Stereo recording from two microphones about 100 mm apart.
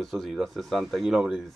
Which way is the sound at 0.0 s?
Centre (ahead or behind).